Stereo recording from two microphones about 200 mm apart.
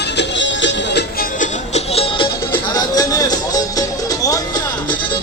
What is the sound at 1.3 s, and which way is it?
Music, 35° left (ahead or behind).